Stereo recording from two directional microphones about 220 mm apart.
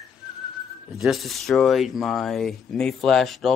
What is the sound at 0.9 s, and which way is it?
Speech, centre (ahead or behind).